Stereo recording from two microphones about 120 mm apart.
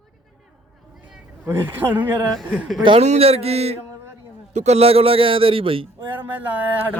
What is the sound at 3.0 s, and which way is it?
A man's voice, 60° right (ahead or behind).